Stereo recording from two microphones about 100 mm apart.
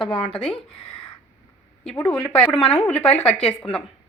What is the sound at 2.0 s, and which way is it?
Speech, 25° left (ahead or behind).